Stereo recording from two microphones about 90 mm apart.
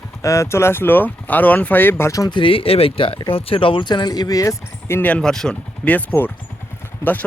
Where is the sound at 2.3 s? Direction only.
85° left; by 4.5 s 40° left (ahead or behind).